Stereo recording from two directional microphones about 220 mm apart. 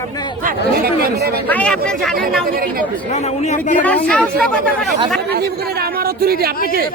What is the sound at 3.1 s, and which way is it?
Speech, 30° left (ahead or behind).